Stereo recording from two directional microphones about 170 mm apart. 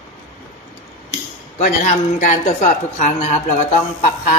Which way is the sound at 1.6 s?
50° left (ahead or behind).